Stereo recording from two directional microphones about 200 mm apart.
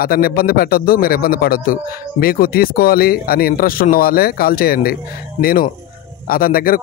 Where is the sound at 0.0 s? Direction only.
50° left (ahead or behind).